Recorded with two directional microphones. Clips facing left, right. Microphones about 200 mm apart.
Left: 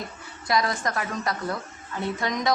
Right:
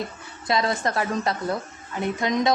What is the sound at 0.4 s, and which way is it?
A woman's voice, 25° right (ahead or behind).